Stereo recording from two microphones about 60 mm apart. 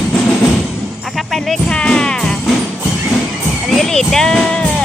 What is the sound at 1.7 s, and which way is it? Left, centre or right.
Music, centre.